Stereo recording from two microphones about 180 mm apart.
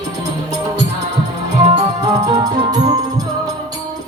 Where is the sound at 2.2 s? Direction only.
20° right (ahead or behind).